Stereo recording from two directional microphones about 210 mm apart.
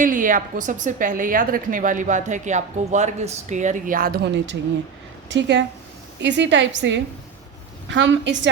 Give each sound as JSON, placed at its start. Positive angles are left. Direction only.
{"t": 0.0, "sound": "a woman's voice", "side_deg": -40}
{"t": 5.3, "sound": "a woman's voice", "side_deg": -60}